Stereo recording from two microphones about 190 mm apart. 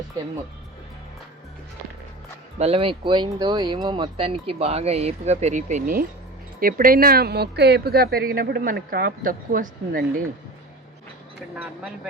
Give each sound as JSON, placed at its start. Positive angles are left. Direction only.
{"t": 2.6, "sound": "speech", "side_deg": -30}
{"t": 11.5, "sound": "speech", "side_deg": -5}